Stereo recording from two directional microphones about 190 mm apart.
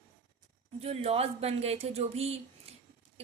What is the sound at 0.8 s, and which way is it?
A woman's voice, 30° right (ahead or behind).